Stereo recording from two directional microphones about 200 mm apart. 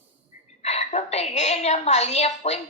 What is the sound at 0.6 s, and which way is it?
A woman's voice, 35° left (ahead or behind).